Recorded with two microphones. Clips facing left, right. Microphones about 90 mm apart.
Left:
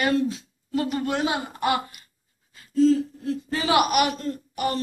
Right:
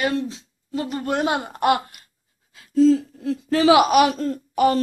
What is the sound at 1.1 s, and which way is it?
A woman's voice, 55° right (ahead or behind).